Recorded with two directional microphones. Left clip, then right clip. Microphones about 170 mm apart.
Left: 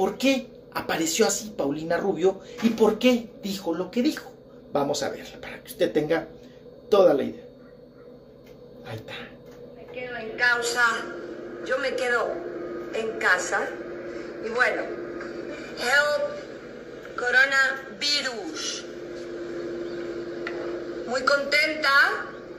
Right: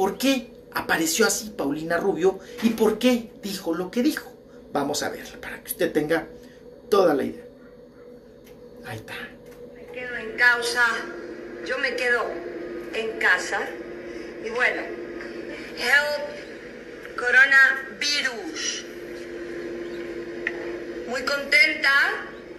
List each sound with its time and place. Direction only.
0.0 s a man's voice: centre (ahead or behind)
9.9 s a woman's voice: 10° left (ahead or behind)
10.6 s a man's voice: 25° left (ahead or behind)
13.2 s a woman's voice: 30° left (ahead or behind)
13.7 s a sound: 30° left (ahead or behind)